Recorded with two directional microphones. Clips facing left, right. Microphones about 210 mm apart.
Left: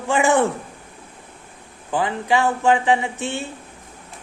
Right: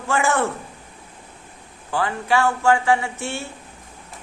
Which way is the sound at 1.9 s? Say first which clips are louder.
Left 1 dB; 15° left (ahead or behind).